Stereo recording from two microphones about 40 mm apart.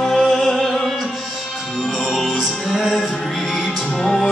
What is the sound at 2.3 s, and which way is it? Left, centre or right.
Music, centre.